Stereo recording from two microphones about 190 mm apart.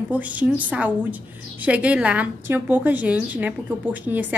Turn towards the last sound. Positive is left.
turn(degrees=-10)  # may be behind; listen again after turning